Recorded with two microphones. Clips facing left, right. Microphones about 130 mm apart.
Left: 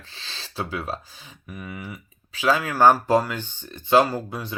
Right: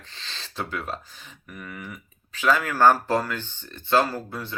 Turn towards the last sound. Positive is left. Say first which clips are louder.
# left 3 dB
turn(degrees=15)  # may be behind; listen again after turning